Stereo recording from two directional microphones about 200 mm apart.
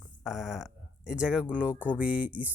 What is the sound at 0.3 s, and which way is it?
Speech, centre (ahead or behind).